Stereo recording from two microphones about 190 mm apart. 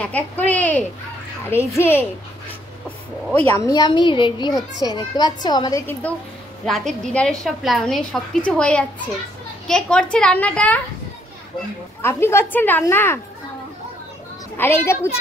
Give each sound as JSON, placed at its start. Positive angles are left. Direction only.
{"t": 0.0, "sound": "a woman's voice", "side_deg": 10}
{"t": 3.5, "sound": "a child's voice", "side_deg": 20}
{"t": 6.6, "sound": "a woman's voice", "side_deg": 0}
{"t": 12.0, "sound": "a woman's voice", "side_deg": 15}
{"t": 14.6, "sound": "a woman's voice", "side_deg": 15}